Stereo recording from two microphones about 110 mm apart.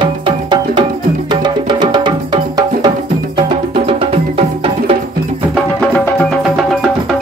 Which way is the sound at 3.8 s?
60° right (ahead or behind).